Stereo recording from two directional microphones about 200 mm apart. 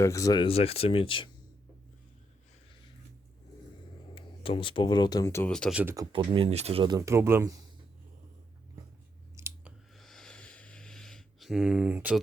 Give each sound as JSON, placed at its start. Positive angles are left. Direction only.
{"t": 0.0, "sound": "speech", "side_deg": 15}
{"t": 4.1, "sound": "speech", "side_deg": 25}
{"t": 5.5, "sound": "speech", "side_deg": 5}
{"t": 5.8, "sound": "speech", "side_deg": -15}
{"t": 6.8, "sound": "speech", "side_deg": -20}
{"t": 9.3, "sound": "chewing", "side_deg": -10}
{"t": 9.9, "sound": "a sound", "side_deg": 0}